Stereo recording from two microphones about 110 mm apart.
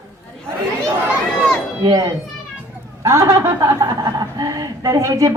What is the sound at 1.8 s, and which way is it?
A child's voice, 35° right (ahead or behind).